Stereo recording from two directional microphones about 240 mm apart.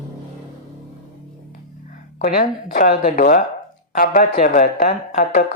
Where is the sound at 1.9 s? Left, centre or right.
Left.